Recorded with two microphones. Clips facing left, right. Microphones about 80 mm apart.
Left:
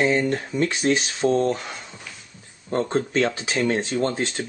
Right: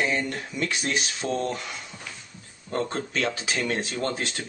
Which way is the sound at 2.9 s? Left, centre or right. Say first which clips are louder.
Left 6 dB; left.